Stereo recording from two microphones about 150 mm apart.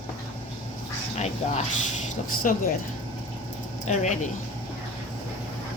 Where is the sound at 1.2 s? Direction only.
45° left (ahead or behind).